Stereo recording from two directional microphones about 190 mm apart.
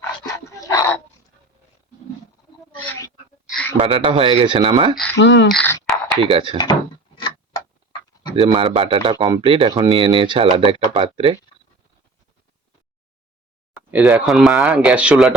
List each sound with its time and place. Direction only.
0.3 s dog: 15° left (ahead or behind)
2.8 s a sound: 10° left (ahead or behind)
3.8 s speech: 25° right (ahead or behind)
5.1 s speech: 70° left (ahead or behind)
5.5 s speech: 5° left (ahead or behind)
6.1 s speech: 25° right (ahead or behind)
7.2 s tick-tock: 25° left (ahead or behind)
8.4 s speech: 30° right (ahead or behind)
13.7 s speech: 5° right (ahead or behind)